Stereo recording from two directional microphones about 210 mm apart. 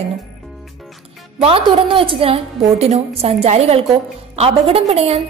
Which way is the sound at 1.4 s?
25° right (ahead or behind).